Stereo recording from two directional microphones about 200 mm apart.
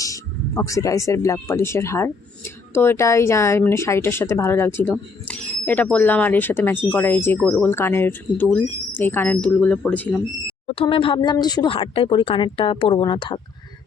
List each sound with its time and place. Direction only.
0.0 s speech: 15° left (ahead or behind)
10.7 s speech: 25° left (ahead or behind)